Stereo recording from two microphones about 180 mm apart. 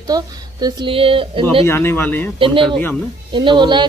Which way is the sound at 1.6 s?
15° left (ahead or behind).